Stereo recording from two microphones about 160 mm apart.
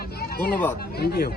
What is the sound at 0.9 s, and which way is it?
Speech, 75° left (ahead or behind).